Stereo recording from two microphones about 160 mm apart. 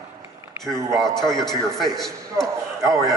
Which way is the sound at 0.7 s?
20° right (ahead or behind).